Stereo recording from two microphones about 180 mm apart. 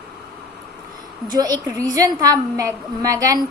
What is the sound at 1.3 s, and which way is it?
A woman's voice, 20° right (ahead or behind).